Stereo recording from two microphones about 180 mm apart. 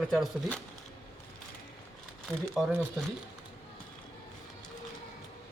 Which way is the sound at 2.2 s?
Centre (ahead or behind).